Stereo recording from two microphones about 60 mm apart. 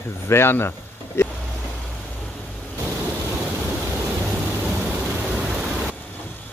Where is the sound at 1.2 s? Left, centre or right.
Left.